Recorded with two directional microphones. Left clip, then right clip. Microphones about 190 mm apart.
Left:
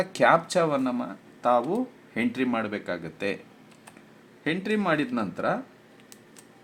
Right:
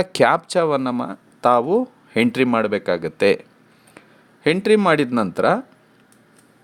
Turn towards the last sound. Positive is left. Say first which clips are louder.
# right 10 dB
turn(degrees=-55)  # may be behind; listen again after turning